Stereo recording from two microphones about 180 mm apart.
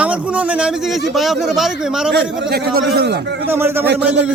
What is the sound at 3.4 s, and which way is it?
Speech, 15° right (ahead or behind).